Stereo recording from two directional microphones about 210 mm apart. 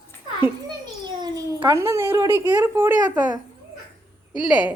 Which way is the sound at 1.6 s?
15° right (ahead or behind).